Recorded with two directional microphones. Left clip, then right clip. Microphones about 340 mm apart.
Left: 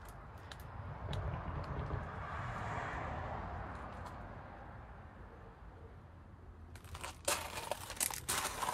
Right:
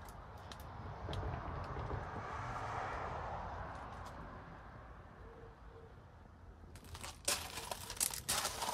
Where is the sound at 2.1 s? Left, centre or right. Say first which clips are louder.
Left 1 dB; right.